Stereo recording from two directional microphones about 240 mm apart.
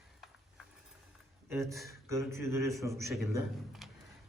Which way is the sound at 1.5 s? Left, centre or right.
Centre.